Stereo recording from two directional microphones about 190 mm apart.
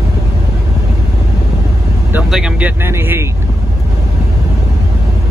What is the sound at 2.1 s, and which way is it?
Vehicle, 5° right (ahead or behind).